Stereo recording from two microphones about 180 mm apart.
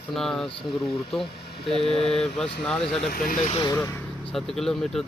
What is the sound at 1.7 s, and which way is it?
Speech, centre (ahead or behind).